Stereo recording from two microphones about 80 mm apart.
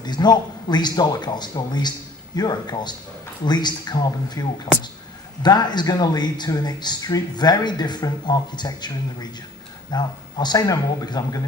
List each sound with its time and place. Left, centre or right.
0.0 s speech: left